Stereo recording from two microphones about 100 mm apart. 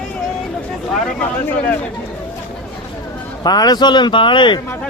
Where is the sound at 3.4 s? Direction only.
40° left (ahead or behind).